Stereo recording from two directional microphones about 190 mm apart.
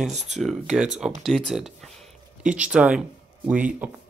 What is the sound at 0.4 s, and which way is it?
Speech, centre (ahead or behind).